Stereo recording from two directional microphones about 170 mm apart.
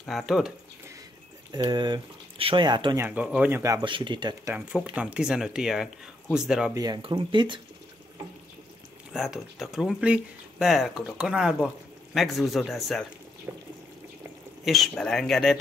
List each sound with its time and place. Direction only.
0.0 s speech: centre (ahead or behind)
1.5 s speech: 25° right (ahead or behind)
3.0 s speech: 10° right (ahead or behind); by 4.4 s 25° right (ahead or behind)
4.5 s speech: 5° right (ahead or behind)
6.7 s speech: 20° right (ahead or behind)
9.1 s speech: centre (ahead or behind)
13.5 s water: 15° right (ahead or behind)
14.6 s speech: centre (ahead or behind)